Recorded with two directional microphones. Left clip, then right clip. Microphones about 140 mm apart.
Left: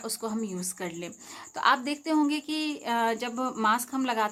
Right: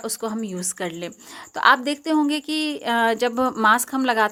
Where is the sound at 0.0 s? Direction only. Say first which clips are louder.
Right 5 dB; 30° right (ahead or behind).